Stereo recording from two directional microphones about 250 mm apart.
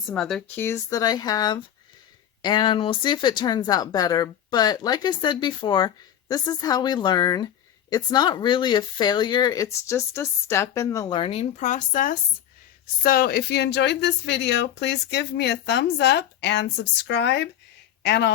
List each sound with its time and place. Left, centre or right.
0.1 s speech: centre; by 18.3 s left